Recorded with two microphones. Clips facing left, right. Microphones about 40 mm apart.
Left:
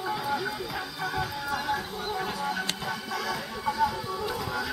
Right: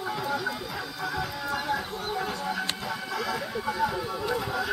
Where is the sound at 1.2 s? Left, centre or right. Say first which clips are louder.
Left 1 dB; right.